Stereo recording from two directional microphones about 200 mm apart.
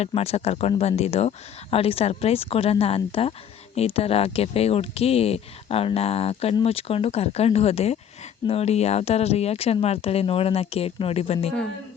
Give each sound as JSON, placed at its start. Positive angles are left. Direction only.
{"t": 0.0, "sound": "speech", "side_deg": 30}